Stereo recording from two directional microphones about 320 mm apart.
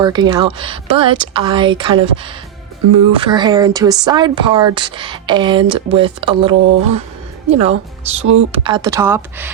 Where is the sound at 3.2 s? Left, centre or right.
Centre.